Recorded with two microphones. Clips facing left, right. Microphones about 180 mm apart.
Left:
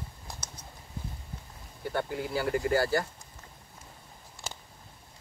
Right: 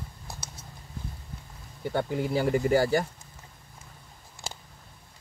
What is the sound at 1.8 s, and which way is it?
Speech, 20° right (ahead or behind).